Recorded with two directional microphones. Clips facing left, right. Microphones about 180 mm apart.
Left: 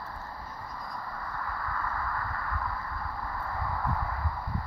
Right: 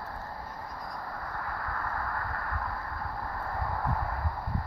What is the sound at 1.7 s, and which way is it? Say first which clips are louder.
Vehicle: left 1 dB; 50° right (ahead or behind).